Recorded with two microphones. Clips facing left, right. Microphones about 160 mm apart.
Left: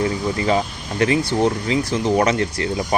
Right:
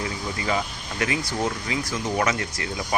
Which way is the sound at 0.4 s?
30° left (ahead or behind).